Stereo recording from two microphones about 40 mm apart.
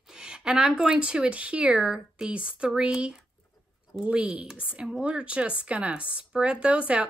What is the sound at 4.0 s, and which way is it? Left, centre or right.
A woman's voice, right.